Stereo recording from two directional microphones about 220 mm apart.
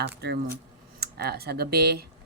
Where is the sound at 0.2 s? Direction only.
50° right (ahead or behind).